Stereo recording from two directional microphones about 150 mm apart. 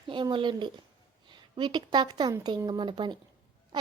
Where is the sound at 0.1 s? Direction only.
35° right (ahead or behind).